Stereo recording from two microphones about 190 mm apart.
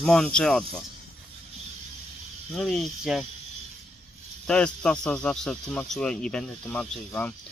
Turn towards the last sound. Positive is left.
turn(degrees=5)  # may be behind; listen again after turning